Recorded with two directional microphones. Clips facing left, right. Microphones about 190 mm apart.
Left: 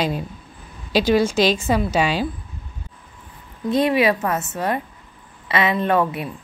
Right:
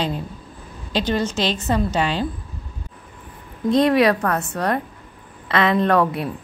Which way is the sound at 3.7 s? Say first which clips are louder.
Right 2 dB; 5° left (ahead or behind).